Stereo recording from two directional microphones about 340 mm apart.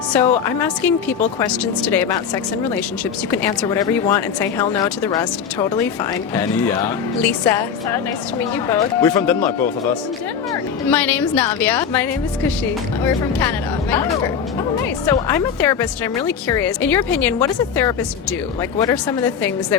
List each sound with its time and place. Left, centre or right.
0.1 s a woman's voice: centre
15.1 s a woman's voice: centre